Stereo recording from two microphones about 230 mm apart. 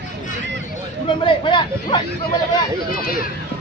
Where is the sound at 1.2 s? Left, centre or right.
Left.